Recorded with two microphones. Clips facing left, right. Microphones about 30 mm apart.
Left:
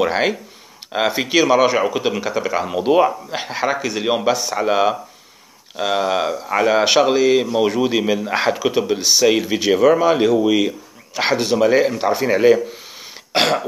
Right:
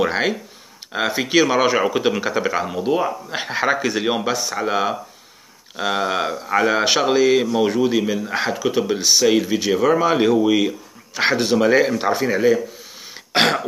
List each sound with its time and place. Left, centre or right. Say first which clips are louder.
0.0 s speech: left 2 dB; centre
2.7 s speech: left 10 dB; left
3.3 s speech: right 1 dB; centre
12.3 s speech: left 5 dB; centre
13.1 s throat clearing: even; centre